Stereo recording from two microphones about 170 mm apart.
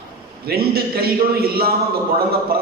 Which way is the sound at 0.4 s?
65° right (ahead or behind).